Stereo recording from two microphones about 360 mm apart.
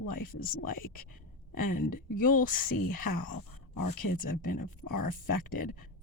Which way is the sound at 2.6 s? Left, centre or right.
Left.